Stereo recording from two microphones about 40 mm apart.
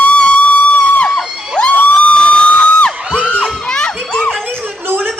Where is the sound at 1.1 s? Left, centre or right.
Centre.